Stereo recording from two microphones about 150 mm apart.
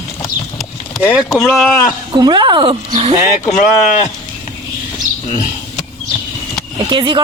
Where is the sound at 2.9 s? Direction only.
40° right (ahead or behind).